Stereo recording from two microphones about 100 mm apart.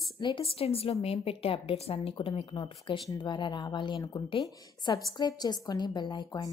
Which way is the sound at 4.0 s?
35° left (ahead or behind).